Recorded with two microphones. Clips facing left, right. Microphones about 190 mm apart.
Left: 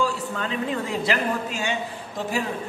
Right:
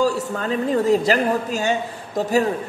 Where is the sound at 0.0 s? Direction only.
40° right (ahead or behind).